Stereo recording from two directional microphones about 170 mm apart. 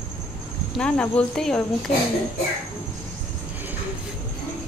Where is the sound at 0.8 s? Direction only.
5° left (ahead or behind).